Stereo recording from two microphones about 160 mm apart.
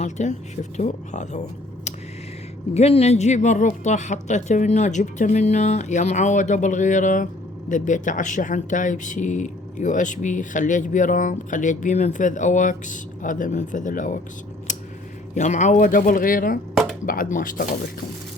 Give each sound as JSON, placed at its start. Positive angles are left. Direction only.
{"t": 0.0, "sound": "speech", "side_deg": 45}
{"t": 2.7, "sound": "speech", "side_deg": 40}
{"t": 14.7, "sound": "scissors", "side_deg": 50}
{"t": 15.4, "sound": "speech", "side_deg": 50}